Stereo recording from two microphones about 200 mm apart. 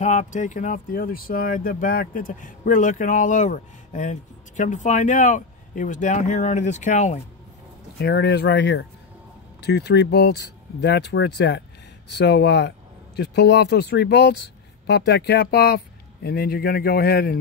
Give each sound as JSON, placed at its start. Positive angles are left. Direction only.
{"t": 0.0, "sound": "speech", "side_deg": 35}
{"t": 8.0, "sound": "speech", "side_deg": 55}